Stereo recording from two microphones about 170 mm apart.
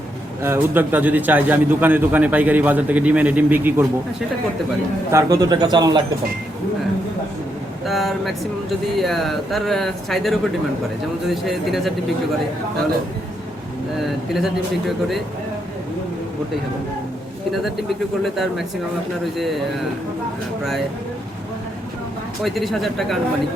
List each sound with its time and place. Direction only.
0.4 s a man's voice: 10° right (ahead or behind)
5.1 s speech: 20° right (ahead or behind)
7.9 s speech: centre (ahead or behind)
14.3 s speech: centre (ahead or behind)
18.2 s speech: centre (ahead or behind)
22.4 s speech: centre (ahead or behind)